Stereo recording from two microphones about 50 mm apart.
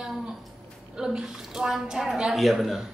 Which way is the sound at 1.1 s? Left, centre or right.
Centre.